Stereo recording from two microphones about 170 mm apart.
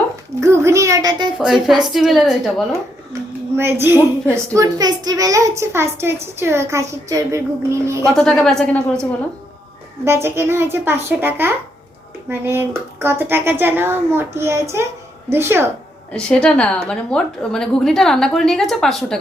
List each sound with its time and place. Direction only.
0.3 s a child's voice: 15° right (ahead or behind)
1.4 s a woman's voice: centre (ahead or behind)
3.1 s a child's voice: 15° right (ahead or behind)
8.1 s a woman's voice: centre (ahead or behind)
10.0 s a child's voice: 15° right (ahead or behind)
16.1 s a woman's voice: 5° left (ahead or behind)